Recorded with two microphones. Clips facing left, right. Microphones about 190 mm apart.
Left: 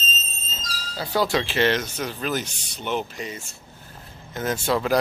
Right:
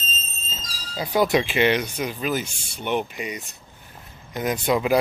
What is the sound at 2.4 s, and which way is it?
Speech, 40° left (ahead or behind).